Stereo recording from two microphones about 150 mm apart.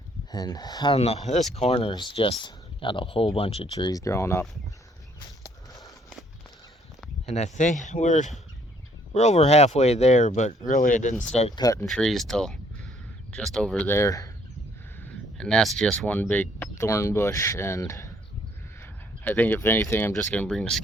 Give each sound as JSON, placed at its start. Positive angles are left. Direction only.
{"t": 0.3, "sound": "speech", "side_deg": 25}
{"t": 0.9, "sound": "speech", "side_deg": 45}
{"t": 5.4, "sound": "a sound", "side_deg": 25}
{"t": 7.3, "sound": "speech", "side_deg": 45}
{"t": 11.1, "sound": "speech", "side_deg": 5}
{"t": 11.5, "sound": "speech", "side_deg": 25}
{"t": 11.9, "sound": "speech", "side_deg": 0}
{"t": 15.0, "sound": "speech", "side_deg": 5}